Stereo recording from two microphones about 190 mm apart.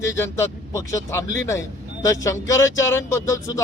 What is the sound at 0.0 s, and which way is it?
A man's voice, 15° left (ahead or behind).